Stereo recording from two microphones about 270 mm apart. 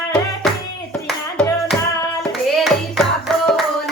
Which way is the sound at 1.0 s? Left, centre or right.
Centre.